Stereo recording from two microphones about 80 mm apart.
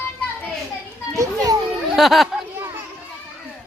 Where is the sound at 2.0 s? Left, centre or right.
Centre.